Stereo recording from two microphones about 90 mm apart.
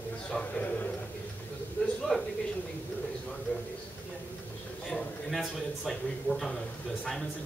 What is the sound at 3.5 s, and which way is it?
Speech, 15° left (ahead or behind).